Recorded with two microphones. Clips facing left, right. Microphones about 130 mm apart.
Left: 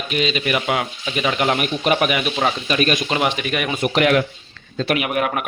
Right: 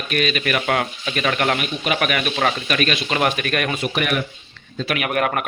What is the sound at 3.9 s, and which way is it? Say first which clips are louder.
Speech: left 8 dB; 85° left.